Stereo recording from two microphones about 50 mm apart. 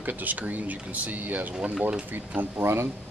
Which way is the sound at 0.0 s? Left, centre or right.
Right.